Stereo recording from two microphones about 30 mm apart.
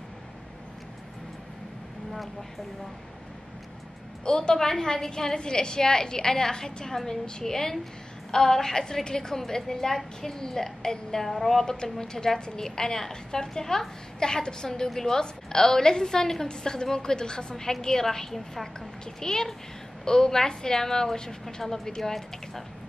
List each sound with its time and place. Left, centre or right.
4.2 s a woman's voice: left
4.6 s a woman's voice: centre
11.2 s a woman's voice: centre
11.6 s a woman's voice: left